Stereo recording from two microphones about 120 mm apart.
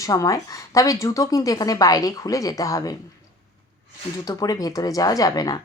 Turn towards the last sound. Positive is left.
turn(degrees=30)  # may be behind; listen again after turning